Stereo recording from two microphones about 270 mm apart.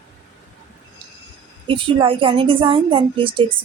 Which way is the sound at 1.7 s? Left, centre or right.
Centre.